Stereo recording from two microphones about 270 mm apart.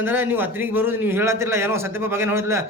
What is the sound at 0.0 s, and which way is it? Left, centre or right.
Speech, centre.